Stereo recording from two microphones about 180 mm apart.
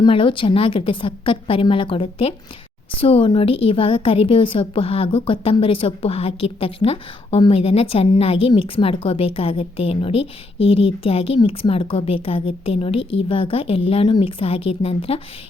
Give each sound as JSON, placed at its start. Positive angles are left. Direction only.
{"t": 0.0, "sound": "a woman's voice", "side_deg": 30}